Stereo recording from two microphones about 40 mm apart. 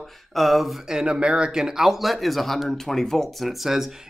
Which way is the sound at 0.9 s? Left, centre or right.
Right.